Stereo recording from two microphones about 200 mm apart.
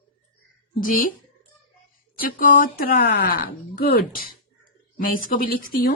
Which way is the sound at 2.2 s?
45° left (ahead or behind).